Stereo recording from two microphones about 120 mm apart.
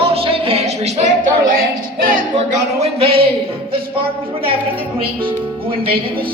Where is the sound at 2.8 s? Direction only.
55° right (ahead or behind).